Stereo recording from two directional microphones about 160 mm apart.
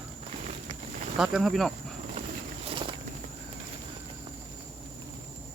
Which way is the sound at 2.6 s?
30° right (ahead or behind).